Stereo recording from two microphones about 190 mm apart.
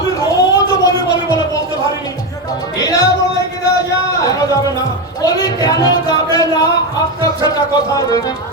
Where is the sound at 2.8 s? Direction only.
20° left (ahead or behind).